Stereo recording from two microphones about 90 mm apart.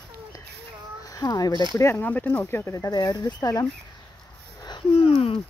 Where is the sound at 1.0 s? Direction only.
40° left (ahead or behind).